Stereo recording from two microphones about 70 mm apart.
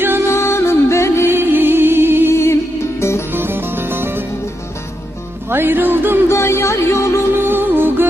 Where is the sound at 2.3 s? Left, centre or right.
Left.